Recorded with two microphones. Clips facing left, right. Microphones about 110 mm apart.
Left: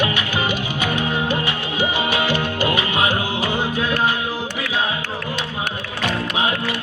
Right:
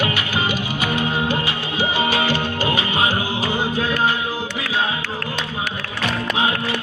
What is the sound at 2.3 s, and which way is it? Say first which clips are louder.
Music: left 1 dB; 30° right (ahead or behind).